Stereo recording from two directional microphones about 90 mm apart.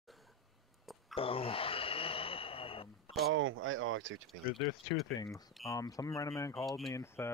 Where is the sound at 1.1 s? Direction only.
90° left.